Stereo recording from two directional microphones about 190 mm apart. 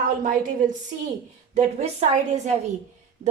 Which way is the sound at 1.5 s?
35° right (ahead or behind).